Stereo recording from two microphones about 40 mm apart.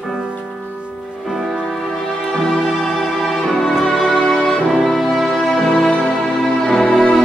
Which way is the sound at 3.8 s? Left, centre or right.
Centre.